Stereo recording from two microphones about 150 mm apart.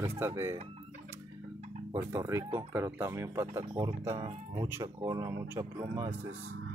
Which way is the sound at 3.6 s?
30° right (ahead or behind).